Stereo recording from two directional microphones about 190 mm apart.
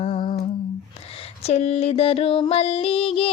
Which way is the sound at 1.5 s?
35° left (ahead or behind).